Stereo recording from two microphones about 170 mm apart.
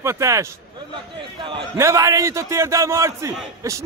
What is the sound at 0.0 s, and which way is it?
Speech, 15° right (ahead or behind).